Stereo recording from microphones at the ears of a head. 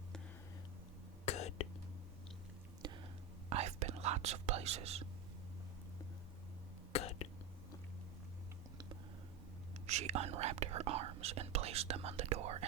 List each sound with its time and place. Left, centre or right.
1.2 s whispering: left
3.5 s whispering: right
6.9 s a sound: left
9.8 s speech: right